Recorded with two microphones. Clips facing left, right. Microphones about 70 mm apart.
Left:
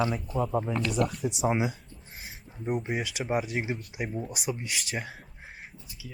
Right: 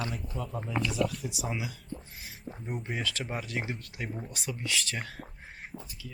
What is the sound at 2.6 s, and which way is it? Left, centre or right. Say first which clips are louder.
Speech: left 5 dB; centre.